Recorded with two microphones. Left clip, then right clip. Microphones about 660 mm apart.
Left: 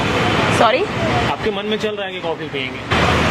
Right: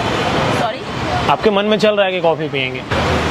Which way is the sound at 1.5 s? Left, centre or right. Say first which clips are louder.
Right 8 dB; right.